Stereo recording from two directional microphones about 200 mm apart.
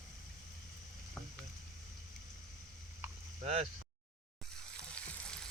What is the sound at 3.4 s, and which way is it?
Speech, 30° right (ahead or behind).